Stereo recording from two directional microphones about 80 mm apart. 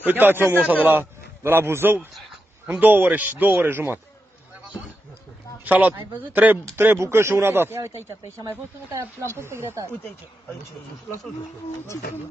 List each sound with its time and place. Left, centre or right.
0.0 s a man's voice: right
5.7 s speech: right